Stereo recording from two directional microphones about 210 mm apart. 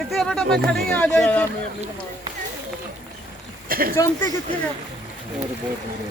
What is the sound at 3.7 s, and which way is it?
Speech, 45° right (ahead or behind).